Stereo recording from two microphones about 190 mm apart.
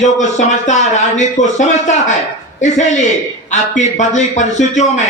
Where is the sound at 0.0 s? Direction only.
40° left (ahead or behind).